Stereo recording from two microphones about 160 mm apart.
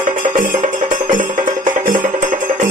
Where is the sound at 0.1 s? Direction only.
55° right (ahead or behind).